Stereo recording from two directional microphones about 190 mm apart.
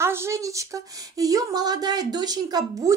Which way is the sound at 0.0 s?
15° right (ahead or behind).